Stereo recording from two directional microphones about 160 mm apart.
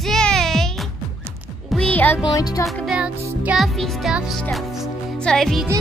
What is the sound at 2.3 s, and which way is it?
Music, 20° left (ahead or behind).